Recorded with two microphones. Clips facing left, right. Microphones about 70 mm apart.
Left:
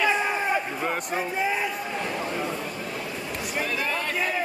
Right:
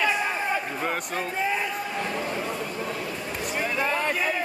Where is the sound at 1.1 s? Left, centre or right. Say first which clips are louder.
Left 1 dB; centre.